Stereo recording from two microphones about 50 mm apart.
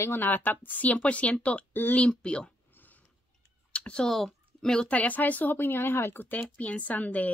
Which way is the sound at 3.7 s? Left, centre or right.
Left.